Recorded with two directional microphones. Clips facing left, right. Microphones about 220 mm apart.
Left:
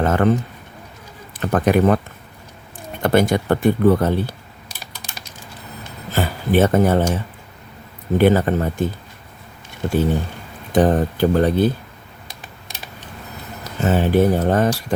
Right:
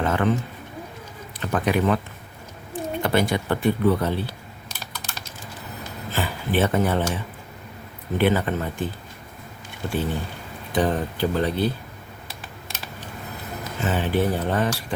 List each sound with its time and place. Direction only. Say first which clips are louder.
0.0 s a sound: left 5 dB; 45° left (ahead or behind)
1.4 s speech: left 6 dB; 50° left (ahead or behind)
3.0 s speech: left 6 dB; 45° left (ahead or behind)
4.8 s typing: even; 10° left (ahead or behind)
6.1 s speech: left 6 dB; 45° left (ahead or behind)
8.2 s speech: left 6 dB; 40° left (ahead or behind)
13.8 s speech: left 7 dB; 45° left (ahead or behind)